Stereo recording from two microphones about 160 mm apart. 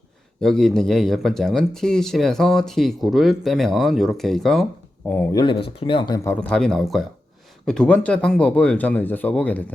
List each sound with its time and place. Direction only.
0.3 s speech: 5° left (ahead or behind)
5.3 s speech: 25° left (ahead or behind)
6.1 s speech: 10° left (ahead or behind)